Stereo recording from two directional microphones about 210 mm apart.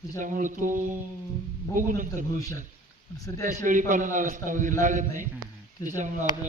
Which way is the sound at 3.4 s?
35° right (ahead or behind).